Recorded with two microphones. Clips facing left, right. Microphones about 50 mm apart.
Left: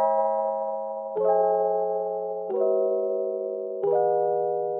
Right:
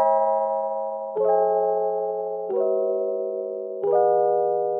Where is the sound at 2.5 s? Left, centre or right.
Centre.